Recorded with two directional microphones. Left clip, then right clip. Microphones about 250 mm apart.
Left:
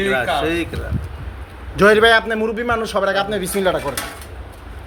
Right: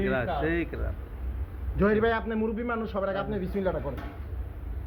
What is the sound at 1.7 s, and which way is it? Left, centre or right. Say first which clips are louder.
A man's voice: left 14 dB; left.